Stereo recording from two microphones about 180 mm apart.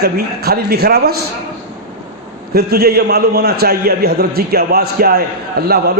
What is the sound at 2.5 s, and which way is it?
A man's voice, 60° right (ahead or behind).